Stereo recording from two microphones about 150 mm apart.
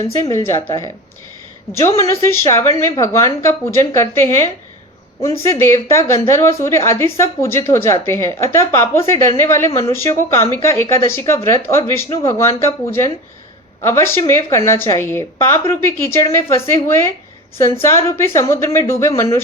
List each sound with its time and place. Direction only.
0.3 s speech: 20° left (ahead or behind)
2.0 s a woman's voice: 20° left (ahead or behind)